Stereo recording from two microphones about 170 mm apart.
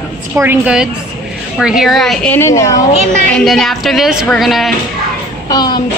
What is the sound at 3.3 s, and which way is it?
A woman's voice, centre (ahead or behind).